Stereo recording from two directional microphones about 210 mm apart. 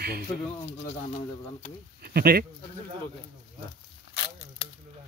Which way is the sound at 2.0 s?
45° right (ahead or behind).